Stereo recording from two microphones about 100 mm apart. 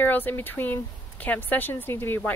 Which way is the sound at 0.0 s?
20° left (ahead or behind).